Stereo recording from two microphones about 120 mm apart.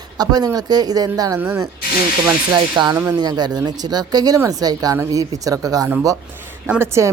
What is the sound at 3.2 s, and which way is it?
A woman's voice, 35° right (ahead or behind).